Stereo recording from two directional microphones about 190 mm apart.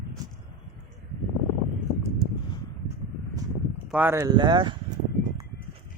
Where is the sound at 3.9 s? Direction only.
10° right (ahead or behind).